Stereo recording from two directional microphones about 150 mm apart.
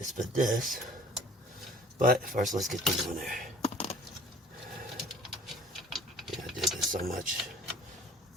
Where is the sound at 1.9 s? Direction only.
70° right (ahead or behind).